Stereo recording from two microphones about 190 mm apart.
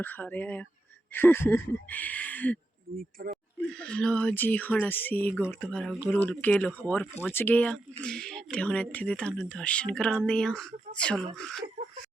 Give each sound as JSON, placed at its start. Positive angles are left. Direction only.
{"t": 0.0, "sound": "speech", "side_deg": 10}
{"t": 3.0, "sound": "speech", "side_deg": -50}
{"t": 3.8, "sound": "speech", "side_deg": 5}